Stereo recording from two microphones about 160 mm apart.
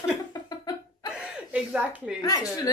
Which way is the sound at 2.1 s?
25° left (ahead or behind).